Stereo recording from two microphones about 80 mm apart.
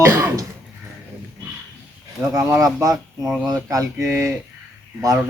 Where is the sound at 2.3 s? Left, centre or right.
Right.